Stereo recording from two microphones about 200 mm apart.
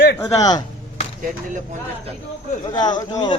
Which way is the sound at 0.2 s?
20° left (ahead or behind).